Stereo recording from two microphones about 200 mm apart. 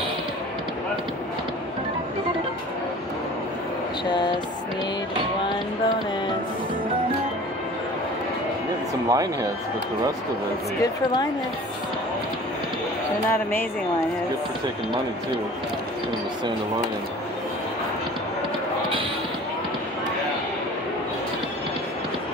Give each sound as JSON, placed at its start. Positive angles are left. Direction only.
{"t": 9.1, "sound": "speech", "side_deg": -15}
{"t": 10.8, "sound": "a woman's voice", "side_deg": 20}
{"t": 13.3, "sound": "speech", "side_deg": 10}